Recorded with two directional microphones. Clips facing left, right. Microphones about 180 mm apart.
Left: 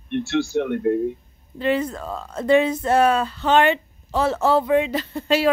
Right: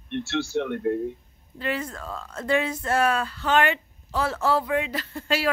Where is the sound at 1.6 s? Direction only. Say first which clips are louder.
Left 8 dB; 20° left (ahead or behind).